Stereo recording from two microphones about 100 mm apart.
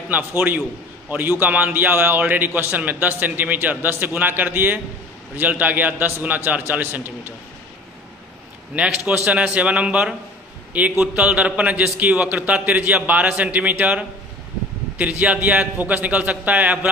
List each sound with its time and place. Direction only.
0.1 s a man's voice: 20° right (ahead or behind)
8.7 s a man's voice: 10° right (ahead or behind)